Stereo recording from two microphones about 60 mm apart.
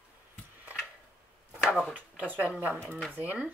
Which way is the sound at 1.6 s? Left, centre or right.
Centre.